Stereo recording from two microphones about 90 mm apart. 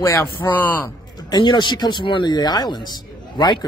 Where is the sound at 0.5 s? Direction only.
20° left (ahead or behind).